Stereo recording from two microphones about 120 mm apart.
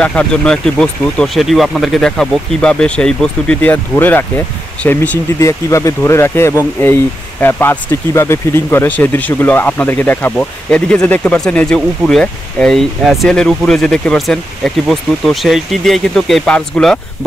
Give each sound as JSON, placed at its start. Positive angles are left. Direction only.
{"t": 0.0, "sound": "speech", "side_deg": 10}
{"t": 5.4, "sound": "speech", "side_deg": 25}